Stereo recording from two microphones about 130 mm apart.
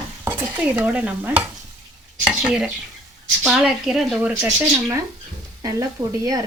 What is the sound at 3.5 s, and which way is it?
Speech, 5° right (ahead or behind).